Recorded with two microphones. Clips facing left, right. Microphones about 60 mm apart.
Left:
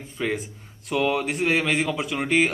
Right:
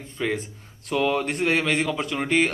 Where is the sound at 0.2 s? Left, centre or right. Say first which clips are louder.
Even; centre.